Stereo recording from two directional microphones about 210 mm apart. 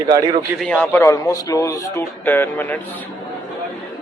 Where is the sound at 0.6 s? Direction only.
5° left (ahead or behind).